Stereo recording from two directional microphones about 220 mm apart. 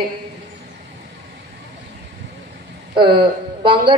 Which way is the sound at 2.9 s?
20° right (ahead or behind).